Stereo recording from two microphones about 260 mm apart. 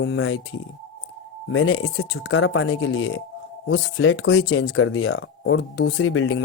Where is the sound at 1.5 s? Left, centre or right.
Left.